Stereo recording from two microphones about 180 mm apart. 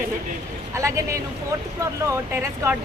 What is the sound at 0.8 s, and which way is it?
Speech, 15° right (ahead or behind).